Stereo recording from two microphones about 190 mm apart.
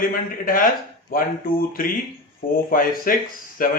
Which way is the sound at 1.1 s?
50° left (ahead or behind).